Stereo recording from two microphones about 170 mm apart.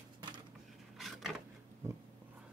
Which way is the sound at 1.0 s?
Centre (ahead or behind).